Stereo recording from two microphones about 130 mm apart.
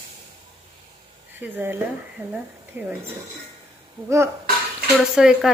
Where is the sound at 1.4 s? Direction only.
15° right (ahead or behind).